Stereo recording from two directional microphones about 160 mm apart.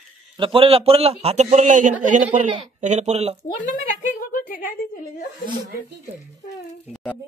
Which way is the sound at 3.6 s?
55° left (ahead or behind).